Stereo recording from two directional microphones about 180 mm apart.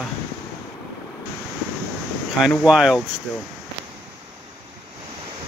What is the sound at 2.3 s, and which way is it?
Speech, centre (ahead or behind).